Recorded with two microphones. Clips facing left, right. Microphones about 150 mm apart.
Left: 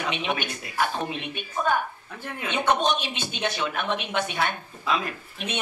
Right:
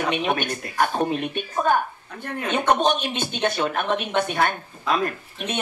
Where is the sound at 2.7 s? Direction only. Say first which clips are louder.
Right 3 dB; 50° right (ahead or behind).